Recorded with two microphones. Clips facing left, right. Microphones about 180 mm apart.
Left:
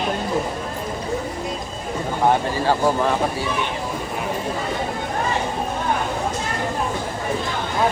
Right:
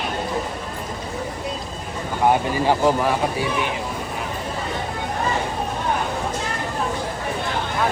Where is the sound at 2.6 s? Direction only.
10° right (ahead or behind).